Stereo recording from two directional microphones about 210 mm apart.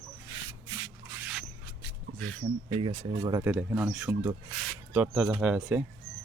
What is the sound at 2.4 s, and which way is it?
Speech, 25° right (ahead or behind).